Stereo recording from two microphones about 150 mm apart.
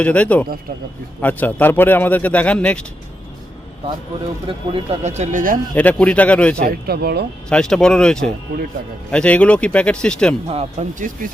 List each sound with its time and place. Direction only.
0.0 s a man's voice: 10° left (ahead or behind)
4.4 s speech: 40° right (ahead or behind); by 5.5 s 60° right (ahead or behind)
5.7 s a man's voice: 10° left (ahead or behind)
6.7 s speech: 90° right
7.5 s a man's voice: 5° left (ahead or behind)
10.4 s speech: 40° right (ahead or behind)